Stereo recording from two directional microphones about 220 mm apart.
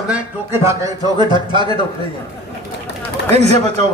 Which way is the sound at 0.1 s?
10° right (ahead or behind).